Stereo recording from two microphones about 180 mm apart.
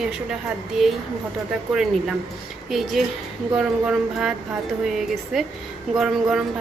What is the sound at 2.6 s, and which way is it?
Speech, centre (ahead or behind).